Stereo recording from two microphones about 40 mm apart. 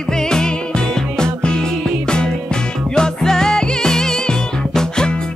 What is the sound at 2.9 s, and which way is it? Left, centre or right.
Music, centre.